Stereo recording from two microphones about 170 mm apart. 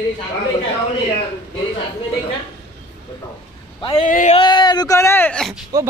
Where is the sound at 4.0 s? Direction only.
45° left (ahead or behind).